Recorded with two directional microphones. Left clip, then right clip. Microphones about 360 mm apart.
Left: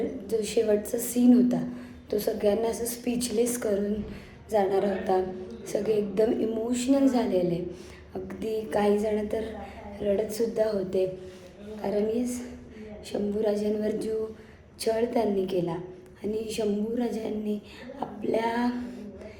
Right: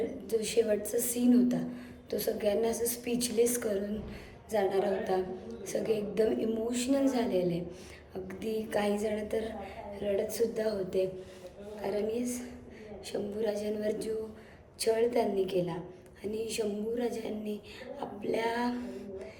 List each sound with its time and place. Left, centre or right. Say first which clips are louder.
0.0 s a woman's voice: left 3 dB; centre